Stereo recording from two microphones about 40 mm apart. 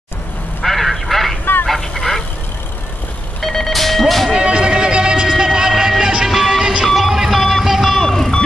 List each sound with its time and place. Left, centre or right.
0.6 s a sound: centre
1.7 s vehicle: centre
3.3 s music: centre
4.3 s music: right; by 8.0 s centre
8.0 s vehicle: centre